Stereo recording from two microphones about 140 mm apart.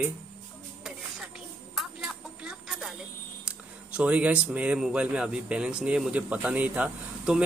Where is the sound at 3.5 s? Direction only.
10° right (ahead or behind).